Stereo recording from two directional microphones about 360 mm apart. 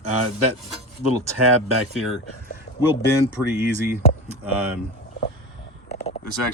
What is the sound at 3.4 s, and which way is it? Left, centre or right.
Speech, centre.